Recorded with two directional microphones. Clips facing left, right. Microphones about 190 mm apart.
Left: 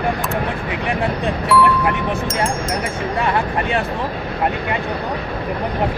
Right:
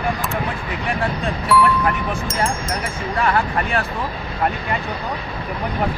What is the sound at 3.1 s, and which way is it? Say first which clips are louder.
Speech: right 1 dB; 20° left (ahead or behind).